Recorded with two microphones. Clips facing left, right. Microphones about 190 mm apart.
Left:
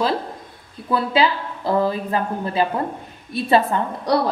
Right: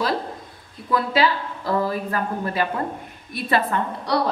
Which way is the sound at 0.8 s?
30° left (ahead or behind).